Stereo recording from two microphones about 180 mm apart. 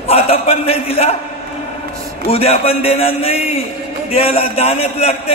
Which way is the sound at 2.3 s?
35° left (ahead or behind).